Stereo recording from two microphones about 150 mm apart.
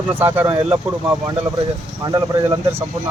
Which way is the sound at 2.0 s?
25° right (ahead or behind).